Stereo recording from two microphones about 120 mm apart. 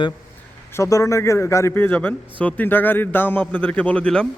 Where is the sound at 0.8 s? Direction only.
25° left (ahead or behind).